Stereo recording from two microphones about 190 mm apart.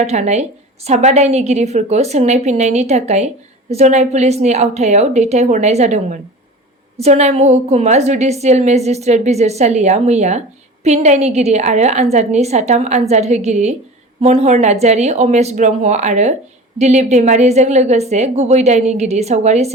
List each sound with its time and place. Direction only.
0.0 s a woman's voice: 35° right (ahead or behind)